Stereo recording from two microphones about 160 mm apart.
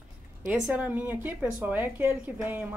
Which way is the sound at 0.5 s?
10° right (ahead or behind).